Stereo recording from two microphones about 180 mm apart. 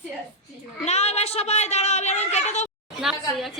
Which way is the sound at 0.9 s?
35° left (ahead or behind).